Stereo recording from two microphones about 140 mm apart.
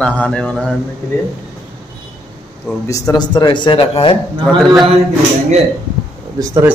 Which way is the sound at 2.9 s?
30° left (ahead or behind).